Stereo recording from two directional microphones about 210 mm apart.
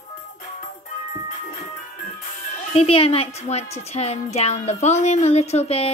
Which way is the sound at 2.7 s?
25° left (ahead or behind).